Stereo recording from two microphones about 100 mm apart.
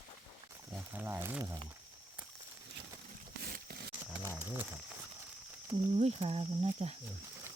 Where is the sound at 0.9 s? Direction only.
20° right (ahead or behind).